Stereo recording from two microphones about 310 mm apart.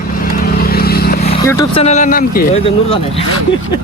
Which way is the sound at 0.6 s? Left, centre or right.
Left.